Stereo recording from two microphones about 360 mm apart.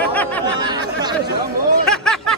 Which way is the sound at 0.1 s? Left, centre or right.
Centre.